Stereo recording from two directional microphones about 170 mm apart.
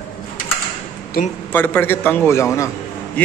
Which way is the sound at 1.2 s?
55° left (ahead or behind).